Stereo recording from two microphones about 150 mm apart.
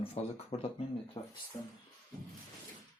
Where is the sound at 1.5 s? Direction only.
40° left (ahead or behind).